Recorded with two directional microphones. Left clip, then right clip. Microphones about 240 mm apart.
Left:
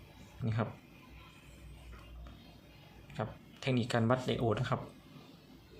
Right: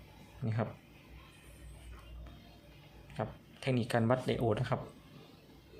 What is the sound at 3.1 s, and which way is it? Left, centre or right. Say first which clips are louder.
Speech: right 1 dB; centre.